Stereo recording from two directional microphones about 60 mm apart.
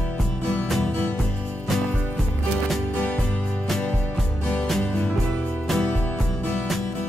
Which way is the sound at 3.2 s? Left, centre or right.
Centre.